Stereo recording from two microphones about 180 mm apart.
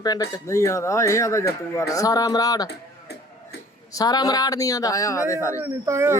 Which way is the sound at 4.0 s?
20° left (ahead or behind).